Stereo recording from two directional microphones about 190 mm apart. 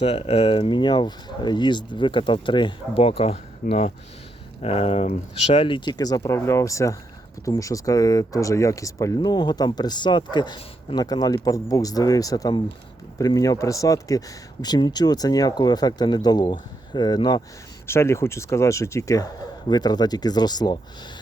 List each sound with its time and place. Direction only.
0.0 s speech: 30° left (ahead or behind)